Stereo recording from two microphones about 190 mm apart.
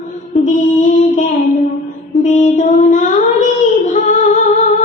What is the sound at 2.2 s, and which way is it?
Child singing, 40° left (ahead or behind).